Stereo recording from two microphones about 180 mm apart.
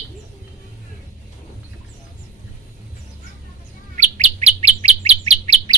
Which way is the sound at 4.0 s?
40° right (ahead or behind).